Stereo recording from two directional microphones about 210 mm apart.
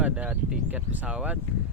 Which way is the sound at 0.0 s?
5° right (ahead or behind).